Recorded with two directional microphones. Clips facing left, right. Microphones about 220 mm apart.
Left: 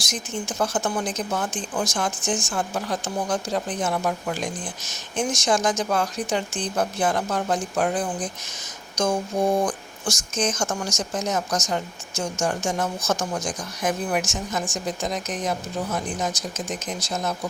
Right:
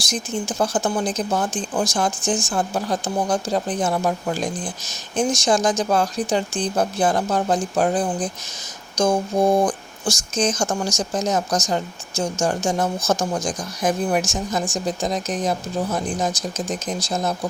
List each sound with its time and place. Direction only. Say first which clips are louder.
0.1 s speech: right 5 dB; 30° right (ahead or behind)